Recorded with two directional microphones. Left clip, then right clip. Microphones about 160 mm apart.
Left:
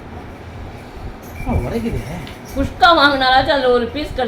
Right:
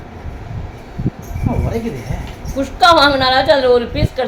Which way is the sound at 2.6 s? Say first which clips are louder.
Right 1 dB; 20° right (ahead or behind).